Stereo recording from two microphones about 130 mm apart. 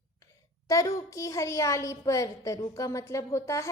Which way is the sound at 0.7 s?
25° left (ahead or behind).